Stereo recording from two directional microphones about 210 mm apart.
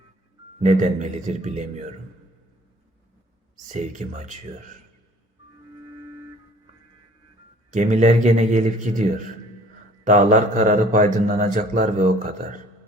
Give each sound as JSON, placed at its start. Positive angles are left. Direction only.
{"t": 0.6, "sound": "a man's voice", "side_deg": -35}
{"t": 3.7, "sound": "a man's voice", "side_deg": -35}
{"t": 7.7, "sound": "a man's voice", "side_deg": -35}